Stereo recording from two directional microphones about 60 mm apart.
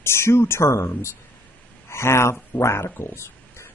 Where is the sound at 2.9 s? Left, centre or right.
Left.